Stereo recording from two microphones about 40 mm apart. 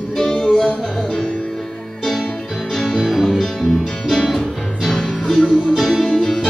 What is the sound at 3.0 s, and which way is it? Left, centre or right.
Music, centre.